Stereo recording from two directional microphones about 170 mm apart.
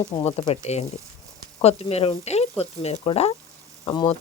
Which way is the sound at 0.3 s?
40° left (ahead or behind).